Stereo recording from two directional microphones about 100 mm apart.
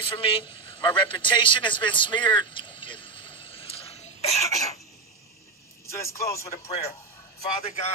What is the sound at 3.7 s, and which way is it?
Cough, 85° left.